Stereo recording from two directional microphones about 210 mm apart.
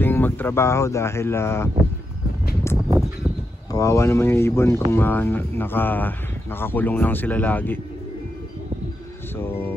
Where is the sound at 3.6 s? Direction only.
15° left (ahead or behind).